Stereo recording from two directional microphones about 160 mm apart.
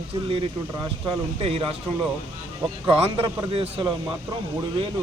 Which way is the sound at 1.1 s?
35° right (ahead or behind).